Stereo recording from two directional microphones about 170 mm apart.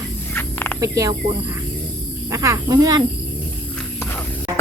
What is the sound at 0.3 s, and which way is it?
Snake, 10° left (ahead or behind).